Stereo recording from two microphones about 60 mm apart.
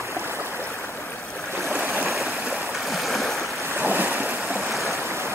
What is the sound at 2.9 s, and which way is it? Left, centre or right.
Stream, centre.